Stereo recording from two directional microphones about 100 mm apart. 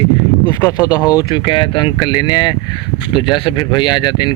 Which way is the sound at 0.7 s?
40° left (ahead or behind).